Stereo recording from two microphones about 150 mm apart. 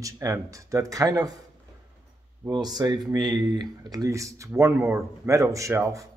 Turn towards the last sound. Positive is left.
turn(degrees=-20)  # may be behind; listen again after turning